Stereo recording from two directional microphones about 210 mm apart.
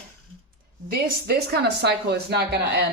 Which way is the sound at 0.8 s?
50° right (ahead or behind).